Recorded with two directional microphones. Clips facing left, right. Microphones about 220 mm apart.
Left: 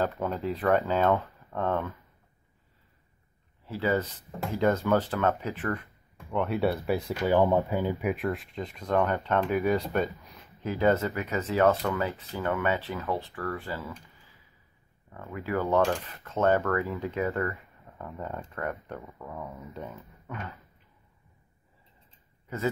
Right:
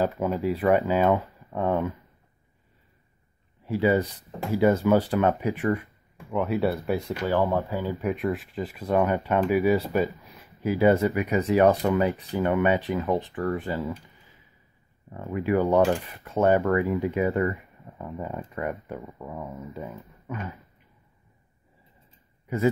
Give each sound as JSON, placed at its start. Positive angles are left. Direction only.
{"t": 0.0, "sound": "speech", "side_deg": -10}
{"t": 3.6, "sound": "speech", "side_deg": -15}
{"t": 6.3, "sound": "speech", "side_deg": 0}
{"t": 15.0, "sound": "speech", "side_deg": -20}
{"t": 19.5, "sound": "speech", "side_deg": 0}
{"t": 22.5, "sound": "speech", "side_deg": -10}